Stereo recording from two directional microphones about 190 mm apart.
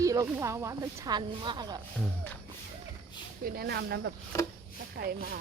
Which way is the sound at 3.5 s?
55° right (ahead or behind).